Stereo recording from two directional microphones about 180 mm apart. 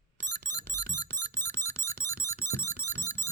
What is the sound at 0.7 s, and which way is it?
Music, 15° left (ahead or behind).